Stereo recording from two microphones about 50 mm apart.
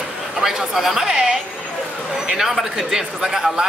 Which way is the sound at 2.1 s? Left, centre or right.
Centre.